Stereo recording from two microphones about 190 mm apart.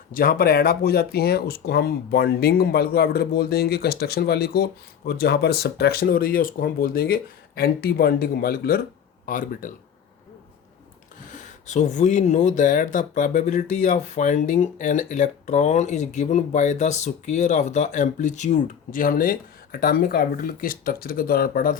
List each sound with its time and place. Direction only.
0.1 s speech: 50° left (ahead or behind)
11.3 s speech: 40° left (ahead or behind)